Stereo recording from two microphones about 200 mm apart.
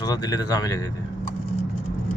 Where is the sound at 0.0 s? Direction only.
20° left (ahead or behind).